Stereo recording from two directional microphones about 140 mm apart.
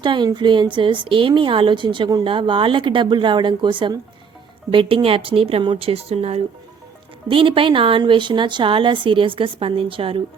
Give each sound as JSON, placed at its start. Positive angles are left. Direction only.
{"t": 0.0, "sound": "speech", "side_deg": -35}